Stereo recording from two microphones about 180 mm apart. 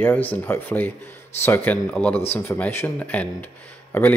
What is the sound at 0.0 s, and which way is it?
Speech, 10° left (ahead or behind).